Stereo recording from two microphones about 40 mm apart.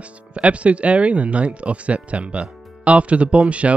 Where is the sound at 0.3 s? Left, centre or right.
Right.